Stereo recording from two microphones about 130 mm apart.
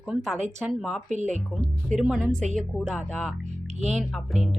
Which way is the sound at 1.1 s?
65° right (ahead or behind).